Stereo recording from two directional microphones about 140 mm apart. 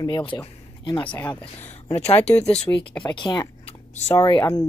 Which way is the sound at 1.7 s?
45° left (ahead or behind).